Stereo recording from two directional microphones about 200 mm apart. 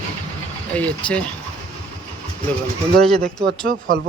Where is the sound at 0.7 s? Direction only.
5° left (ahead or behind).